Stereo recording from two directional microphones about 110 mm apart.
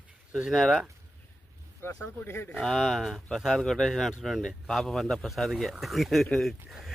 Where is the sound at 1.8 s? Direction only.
20° left (ahead or behind).